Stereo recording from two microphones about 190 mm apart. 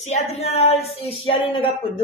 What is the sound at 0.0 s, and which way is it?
Speech, 35° left (ahead or behind).